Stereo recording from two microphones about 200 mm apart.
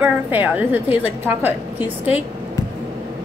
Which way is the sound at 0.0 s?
10° right (ahead or behind).